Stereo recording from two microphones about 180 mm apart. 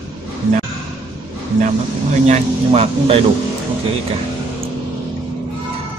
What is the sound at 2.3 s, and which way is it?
Speech, 35° right (ahead or behind).